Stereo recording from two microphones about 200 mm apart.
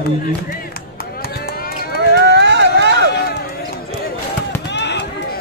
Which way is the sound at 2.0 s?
60° right (ahead or behind).